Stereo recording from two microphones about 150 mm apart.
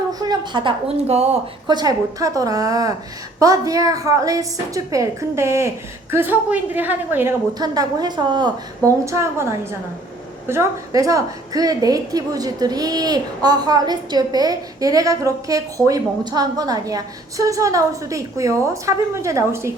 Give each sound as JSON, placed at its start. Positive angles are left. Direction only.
{"t": 0.1, "sound": "a woman's voice", "side_deg": -25}
{"t": 1.6, "sound": "a woman's voice", "side_deg": -30}
{"t": 7.6, "sound": "a woman's voice", "side_deg": -25}